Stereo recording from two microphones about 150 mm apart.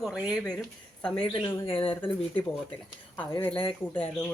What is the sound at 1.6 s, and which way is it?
Speech, 40° left (ahead or behind).